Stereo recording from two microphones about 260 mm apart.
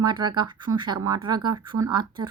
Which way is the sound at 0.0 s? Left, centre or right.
Centre.